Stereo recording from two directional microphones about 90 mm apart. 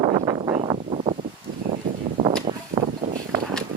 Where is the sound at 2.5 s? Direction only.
90° right.